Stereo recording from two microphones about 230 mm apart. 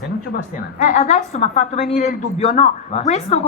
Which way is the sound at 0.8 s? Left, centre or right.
Left.